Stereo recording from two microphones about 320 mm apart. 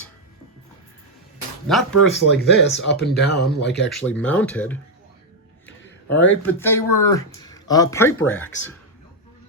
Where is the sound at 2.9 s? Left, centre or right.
Left.